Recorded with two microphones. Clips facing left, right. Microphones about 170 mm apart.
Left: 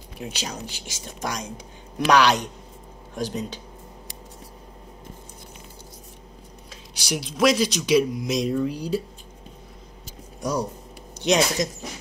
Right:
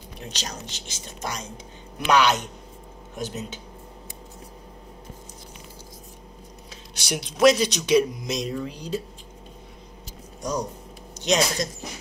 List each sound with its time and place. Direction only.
0.2 s speech: 10° left (ahead or behind)
2.0 s speech: centre (ahead or behind)
7.1 s speech: centre (ahead or behind)
10.4 s speech: 10° left (ahead or behind)